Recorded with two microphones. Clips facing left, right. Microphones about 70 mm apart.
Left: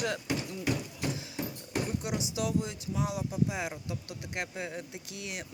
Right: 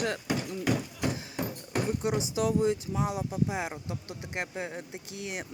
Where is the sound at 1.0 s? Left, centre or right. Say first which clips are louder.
Right 2 dB; right.